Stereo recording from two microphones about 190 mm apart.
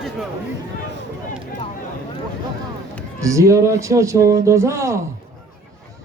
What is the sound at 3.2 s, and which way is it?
A man's voice, 15° right (ahead or behind).